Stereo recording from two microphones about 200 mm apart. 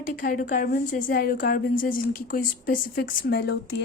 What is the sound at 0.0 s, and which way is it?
A woman's voice, 45° left (ahead or behind).